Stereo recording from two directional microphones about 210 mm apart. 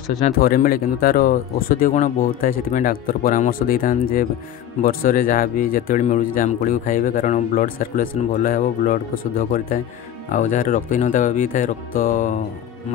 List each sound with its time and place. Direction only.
0.2 s speech: 40° left (ahead or behind)
10.3 s speech: 40° left (ahead or behind)